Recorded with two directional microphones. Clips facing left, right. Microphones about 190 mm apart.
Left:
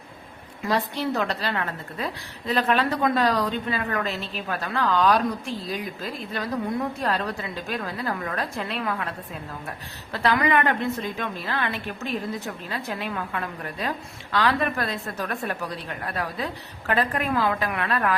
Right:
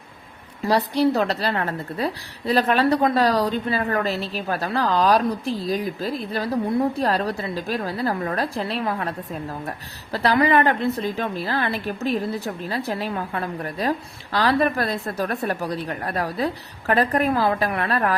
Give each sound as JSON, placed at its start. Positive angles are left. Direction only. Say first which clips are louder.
{"t": 0.6, "sound": "a woman's voice", "louder": "right 6 dB", "side_deg": -35}